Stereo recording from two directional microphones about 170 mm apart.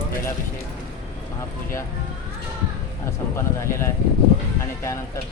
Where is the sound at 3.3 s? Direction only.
15° left (ahead or behind).